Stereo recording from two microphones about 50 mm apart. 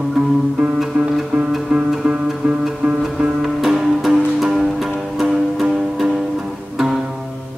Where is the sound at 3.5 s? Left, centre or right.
Centre.